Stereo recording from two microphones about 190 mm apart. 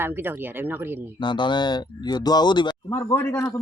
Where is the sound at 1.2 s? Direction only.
25° left (ahead or behind).